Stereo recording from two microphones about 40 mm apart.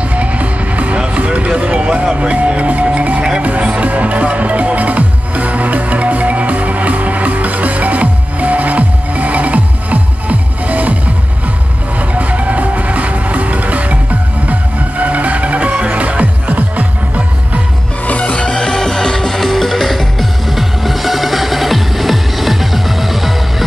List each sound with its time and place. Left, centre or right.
0.1 s music: right
12.1 s music: right
18.0 s music: left
18.3 s music: left; by 23.3 s centre